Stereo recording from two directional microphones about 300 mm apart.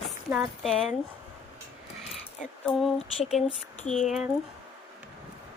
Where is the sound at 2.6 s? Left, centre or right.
Centre.